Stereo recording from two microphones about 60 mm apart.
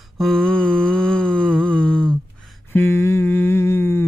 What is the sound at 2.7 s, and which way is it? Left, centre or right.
Humming, left.